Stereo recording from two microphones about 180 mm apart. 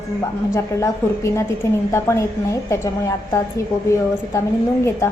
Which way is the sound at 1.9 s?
15° left (ahead or behind).